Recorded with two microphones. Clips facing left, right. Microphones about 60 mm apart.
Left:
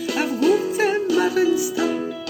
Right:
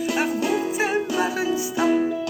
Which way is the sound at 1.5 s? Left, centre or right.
Right.